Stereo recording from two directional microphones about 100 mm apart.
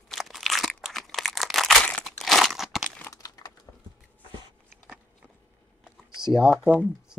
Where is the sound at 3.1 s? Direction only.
35° left (ahead or behind).